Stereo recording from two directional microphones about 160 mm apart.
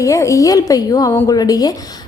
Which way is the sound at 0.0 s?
20° left (ahead or behind).